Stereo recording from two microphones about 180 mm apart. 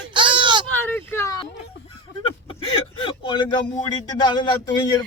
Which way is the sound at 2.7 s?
30° left (ahead or behind).